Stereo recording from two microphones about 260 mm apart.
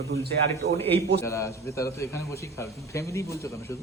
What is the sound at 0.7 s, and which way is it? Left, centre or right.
A man's voice, centre.